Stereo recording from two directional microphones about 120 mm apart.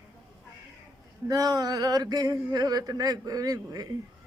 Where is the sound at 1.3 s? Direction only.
30° right (ahead or behind).